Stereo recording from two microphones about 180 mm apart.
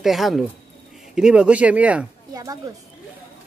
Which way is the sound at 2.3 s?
20° right (ahead or behind).